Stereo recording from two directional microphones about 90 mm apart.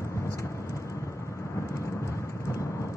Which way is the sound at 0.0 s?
35° left (ahead or behind).